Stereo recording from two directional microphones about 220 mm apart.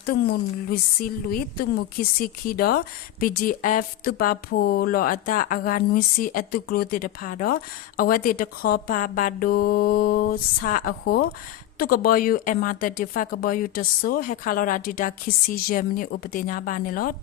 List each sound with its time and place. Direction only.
0.0 s a woman's voice: 45° left (ahead or behind)